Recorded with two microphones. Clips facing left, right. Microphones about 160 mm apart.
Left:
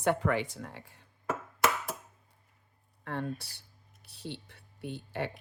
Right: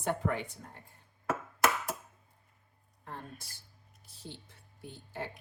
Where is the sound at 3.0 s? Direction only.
70° left (ahead or behind).